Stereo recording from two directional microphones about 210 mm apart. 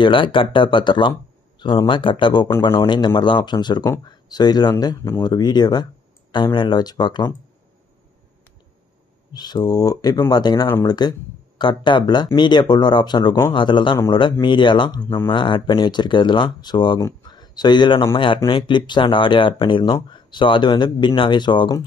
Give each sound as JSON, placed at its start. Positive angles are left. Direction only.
{"t": 0.0, "sound": "speech", "side_deg": 25}
{"t": 9.3, "sound": "speech", "side_deg": 20}
{"t": 15.3, "sound": "speech", "side_deg": 25}